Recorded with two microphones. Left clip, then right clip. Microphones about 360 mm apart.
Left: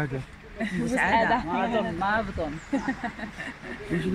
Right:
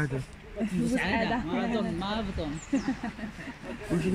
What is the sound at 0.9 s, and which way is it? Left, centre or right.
Speech, left.